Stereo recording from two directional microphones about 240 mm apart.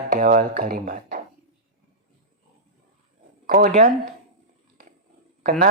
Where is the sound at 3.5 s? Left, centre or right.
Right.